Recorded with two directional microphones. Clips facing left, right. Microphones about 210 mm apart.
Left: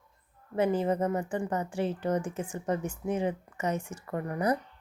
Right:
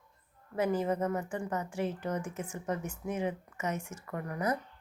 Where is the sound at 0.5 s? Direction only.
30° left (ahead or behind).